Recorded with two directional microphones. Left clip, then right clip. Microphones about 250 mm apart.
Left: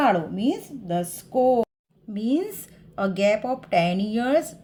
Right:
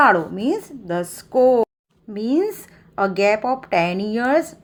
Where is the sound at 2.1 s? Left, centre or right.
Centre.